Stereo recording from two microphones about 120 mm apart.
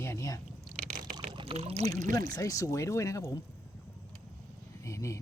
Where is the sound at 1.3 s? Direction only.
55° right (ahead or behind).